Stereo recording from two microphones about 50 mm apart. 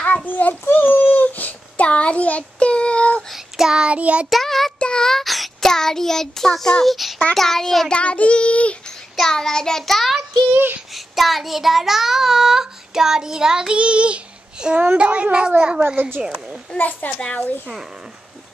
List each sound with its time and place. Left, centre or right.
0.0 s a sound: left
3.3 s child singing: centre; by 4.3 s right
4.3 s child singing: centre
4.7 s child singing: centre
5.2 s child singing: centre
6.9 s a child's voice: centre
7.9 s child singing: left
9.1 s child singing: centre
10.5 s speech: right
11.0 s child singing: centre; by 14.8 s right
15.0 s a child's voice: right
16.2 s child singing: centre
16.7 s a child's voice: left
17.2 s child singing: left